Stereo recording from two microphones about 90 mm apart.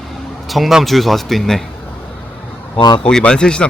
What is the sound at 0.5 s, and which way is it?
Speech, centre (ahead or behind).